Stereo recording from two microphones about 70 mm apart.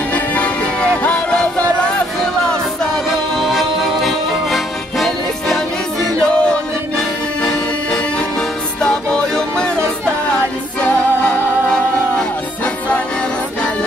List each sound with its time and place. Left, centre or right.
0.1 s music: left
3.3 s music: centre
6.3 s music: centre
11.2 s music: centre